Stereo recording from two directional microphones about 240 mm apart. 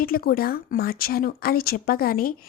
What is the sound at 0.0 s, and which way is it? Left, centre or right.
Speech, left.